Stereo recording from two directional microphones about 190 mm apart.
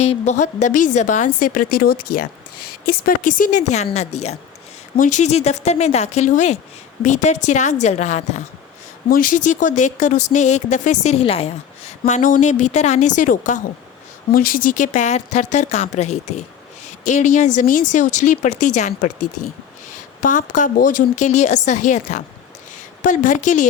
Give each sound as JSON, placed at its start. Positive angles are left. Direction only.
{"t": 0.0, "sound": "a woman's voice", "side_deg": 35}
{"t": 20.2, "sound": "a woman's voice", "side_deg": 45}